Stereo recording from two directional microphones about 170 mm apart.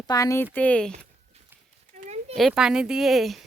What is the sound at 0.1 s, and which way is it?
Speech, 20° left (ahead or behind).